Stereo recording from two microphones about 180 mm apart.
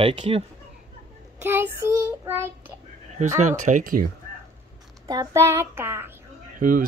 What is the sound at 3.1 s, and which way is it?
Speech, 40° right (ahead or behind).